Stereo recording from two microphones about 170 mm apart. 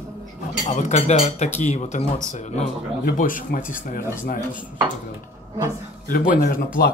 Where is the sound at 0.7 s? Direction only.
45° left (ahead or behind).